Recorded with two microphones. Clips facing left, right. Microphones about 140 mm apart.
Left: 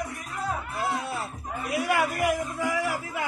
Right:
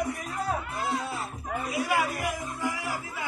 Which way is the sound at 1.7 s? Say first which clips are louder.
Left 2 dB; 65° left (ahead or behind).